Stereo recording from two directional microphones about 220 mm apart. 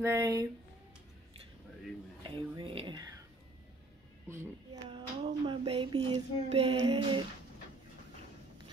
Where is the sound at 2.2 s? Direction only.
20° right (ahead or behind).